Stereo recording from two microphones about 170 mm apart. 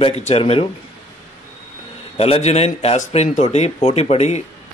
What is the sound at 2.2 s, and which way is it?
A man's voice, 40° left (ahead or behind).